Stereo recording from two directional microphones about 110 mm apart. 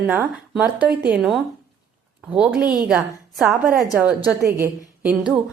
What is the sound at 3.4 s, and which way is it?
Speech, 30° right (ahead or behind).